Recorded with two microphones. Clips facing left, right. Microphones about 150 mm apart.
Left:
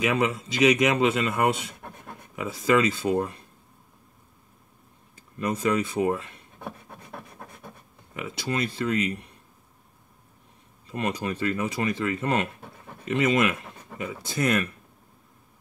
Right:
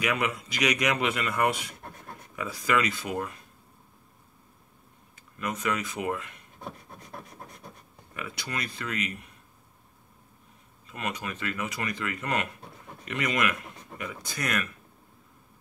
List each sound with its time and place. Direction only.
0.0 s speech: 25° left (ahead or behind)
5.1 s speech: 30° left (ahead or behind)
8.1 s speech: 25° left (ahead or behind)
10.9 s speech: 30° left (ahead or behind)